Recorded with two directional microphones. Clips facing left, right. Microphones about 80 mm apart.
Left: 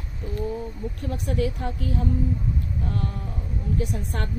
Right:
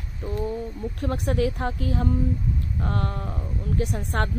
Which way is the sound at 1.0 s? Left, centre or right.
Right.